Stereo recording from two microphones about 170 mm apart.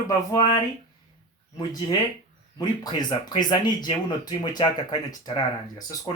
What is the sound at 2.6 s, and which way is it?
Speech, 25° left (ahead or behind).